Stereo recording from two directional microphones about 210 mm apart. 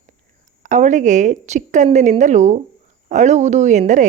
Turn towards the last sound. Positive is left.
turn(degrees=-35)  # may be behind; listen again after turning